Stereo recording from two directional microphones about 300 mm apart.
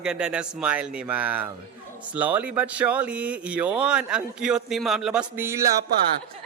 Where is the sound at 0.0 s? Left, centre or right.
Centre.